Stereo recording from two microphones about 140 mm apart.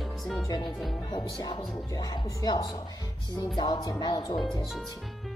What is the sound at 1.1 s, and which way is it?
A woman's voice, 30° left (ahead or behind).